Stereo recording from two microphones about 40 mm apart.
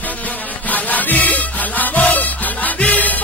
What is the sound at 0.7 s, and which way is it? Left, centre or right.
Music, left.